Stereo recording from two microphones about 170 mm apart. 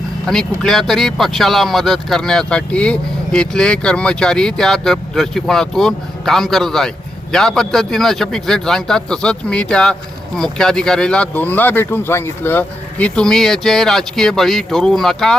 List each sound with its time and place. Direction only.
0.3 s speech: 5° left (ahead or behind)